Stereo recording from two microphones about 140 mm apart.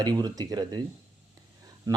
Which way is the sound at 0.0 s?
30° right (ahead or behind).